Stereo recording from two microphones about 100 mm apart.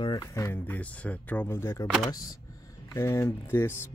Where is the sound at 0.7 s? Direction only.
15° left (ahead or behind).